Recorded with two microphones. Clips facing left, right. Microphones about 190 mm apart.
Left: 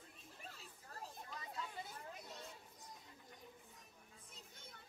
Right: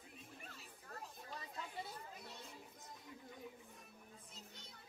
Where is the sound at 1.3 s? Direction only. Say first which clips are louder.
Right 1 dB; 30° right (ahead or behind).